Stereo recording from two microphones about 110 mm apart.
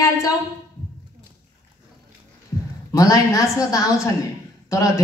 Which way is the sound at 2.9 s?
30° left (ahead or behind).